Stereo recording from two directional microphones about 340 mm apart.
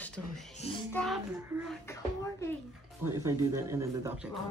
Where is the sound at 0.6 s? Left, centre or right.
Centre.